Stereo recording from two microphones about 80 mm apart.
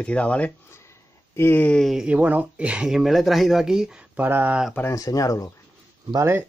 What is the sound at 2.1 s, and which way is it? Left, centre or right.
Speech, centre.